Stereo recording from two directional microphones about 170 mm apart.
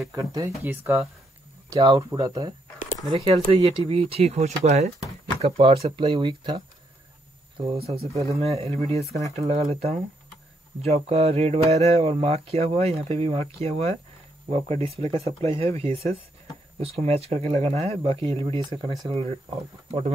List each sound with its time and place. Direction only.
0.1 s speech: 20° right (ahead or behind)
7.6 s speech: 35° right (ahead or behind)